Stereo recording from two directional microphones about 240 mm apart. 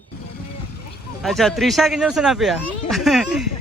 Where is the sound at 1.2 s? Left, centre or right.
Centre.